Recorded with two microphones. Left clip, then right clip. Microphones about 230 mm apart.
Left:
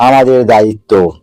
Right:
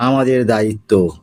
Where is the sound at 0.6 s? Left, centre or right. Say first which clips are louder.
Left 9 dB; centre.